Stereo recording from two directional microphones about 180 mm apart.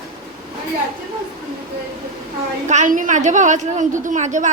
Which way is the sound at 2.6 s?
45° right (ahead or behind).